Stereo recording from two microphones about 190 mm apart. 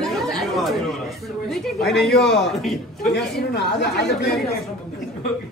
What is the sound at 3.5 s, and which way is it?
Speech, 65° left (ahead or behind).